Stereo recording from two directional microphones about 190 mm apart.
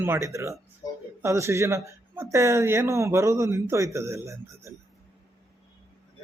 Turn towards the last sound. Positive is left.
turn(degrees=-15)  # may be behind; listen again after turning